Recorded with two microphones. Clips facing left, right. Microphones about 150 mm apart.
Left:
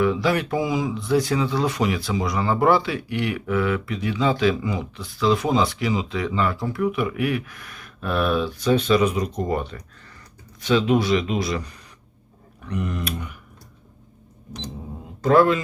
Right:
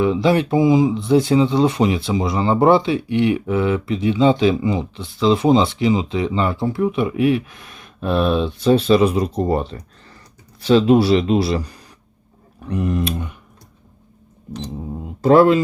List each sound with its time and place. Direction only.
0.0 s speech: 25° right (ahead or behind)
15.2 s speech: 30° right (ahead or behind)